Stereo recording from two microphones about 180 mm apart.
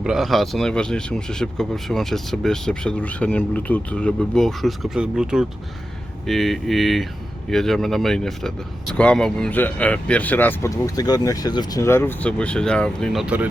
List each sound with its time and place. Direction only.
0.0 s speech: centre (ahead or behind)